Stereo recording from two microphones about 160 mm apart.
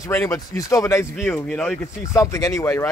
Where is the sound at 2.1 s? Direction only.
20° left (ahead or behind).